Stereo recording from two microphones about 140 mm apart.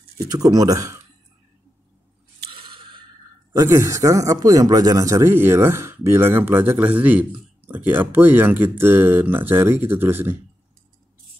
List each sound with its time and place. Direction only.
0.2 s speech: 25° right (ahead or behind)
2.6 s a sound: 35° right (ahead or behind)
3.5 s speech: 20° right (ahead or behind)